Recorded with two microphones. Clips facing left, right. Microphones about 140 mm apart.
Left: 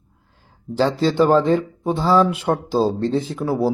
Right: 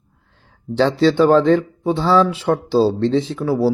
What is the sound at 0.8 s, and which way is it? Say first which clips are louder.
A man's voice: right 3 dB; 10° left (ahead or behind).